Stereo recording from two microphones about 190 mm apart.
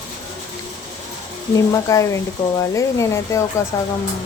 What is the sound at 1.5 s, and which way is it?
Speech, 15° left (ahead or behind).